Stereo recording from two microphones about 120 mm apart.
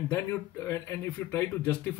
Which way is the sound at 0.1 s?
25° left (ahead or behind).